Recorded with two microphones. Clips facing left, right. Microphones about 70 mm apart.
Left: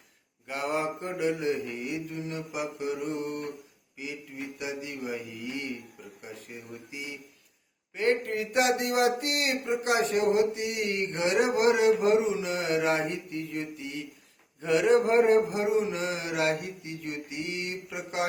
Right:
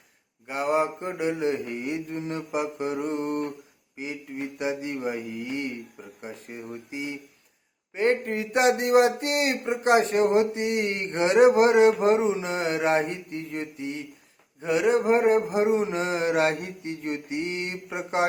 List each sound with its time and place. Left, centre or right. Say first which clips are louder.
0.4 s a man's voice: right 5 dB; right
14.6 s a man's voice: even; centre